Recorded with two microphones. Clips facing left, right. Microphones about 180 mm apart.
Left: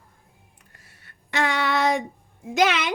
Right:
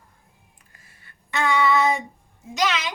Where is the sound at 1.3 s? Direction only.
75° left (ahead or behind).